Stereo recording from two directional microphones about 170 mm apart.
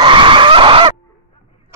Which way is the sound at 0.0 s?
30° right (ahead or behind).